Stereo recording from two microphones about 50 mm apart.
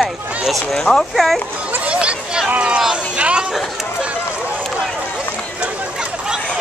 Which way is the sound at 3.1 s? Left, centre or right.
Right.